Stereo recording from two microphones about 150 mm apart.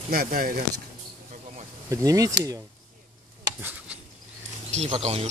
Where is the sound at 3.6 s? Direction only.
15° right (ahead or behind).